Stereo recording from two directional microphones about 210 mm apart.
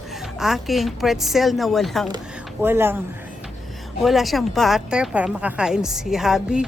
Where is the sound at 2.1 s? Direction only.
10° right (ahead or behind).